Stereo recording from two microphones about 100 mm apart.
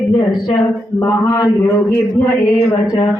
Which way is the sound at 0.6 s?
30° left (ahead or behind).